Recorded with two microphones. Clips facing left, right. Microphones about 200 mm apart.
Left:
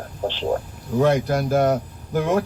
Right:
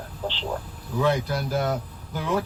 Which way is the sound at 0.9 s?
45° left (ahead or behind).